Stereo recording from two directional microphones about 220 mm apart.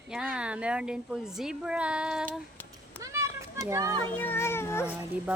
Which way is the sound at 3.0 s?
15° right (ahead or behind).